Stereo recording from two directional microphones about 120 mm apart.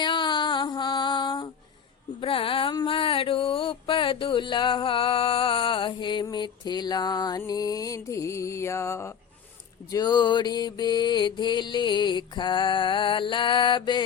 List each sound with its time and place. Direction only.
0.0 s music: 40° left (ahead or behind)
2.2 s mantra: 50° left (ahead or behind)
6.2 s music: 35° left (ahead or behind)
9.9 s mantra: 35° left (ahead or behind)